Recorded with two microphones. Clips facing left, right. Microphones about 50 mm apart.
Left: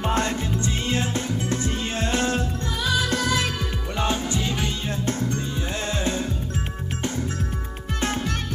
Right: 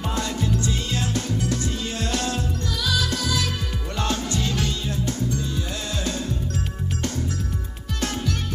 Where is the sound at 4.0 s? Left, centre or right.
Centre.